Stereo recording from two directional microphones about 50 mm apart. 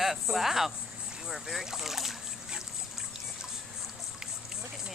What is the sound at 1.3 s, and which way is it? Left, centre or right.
Boat, centre.